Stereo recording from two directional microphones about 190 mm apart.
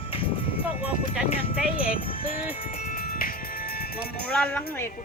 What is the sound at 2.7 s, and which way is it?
Music, 50° left (ahead or behind).